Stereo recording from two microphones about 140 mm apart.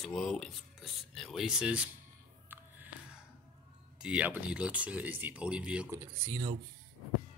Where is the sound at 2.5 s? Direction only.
15° right (ahead or behind).